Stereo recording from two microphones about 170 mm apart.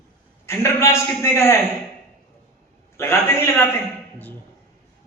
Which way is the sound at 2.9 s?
15° left (ahead or behind).